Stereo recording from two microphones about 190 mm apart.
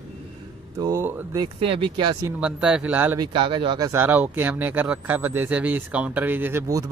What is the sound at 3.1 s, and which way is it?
Speech, 25° right (ahead or behind).